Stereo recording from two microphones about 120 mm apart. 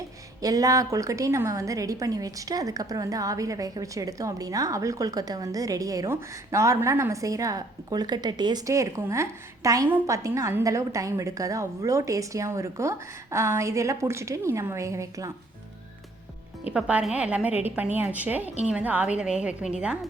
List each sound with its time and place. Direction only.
0.4 s a woman's voice: 30° right (ahead or behind)
16.7 s a woman's voice: 10° right (ahead or behind)